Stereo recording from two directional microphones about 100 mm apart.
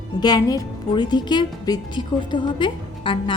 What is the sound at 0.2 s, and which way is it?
A woman's voice, 45° left (ahead or behind).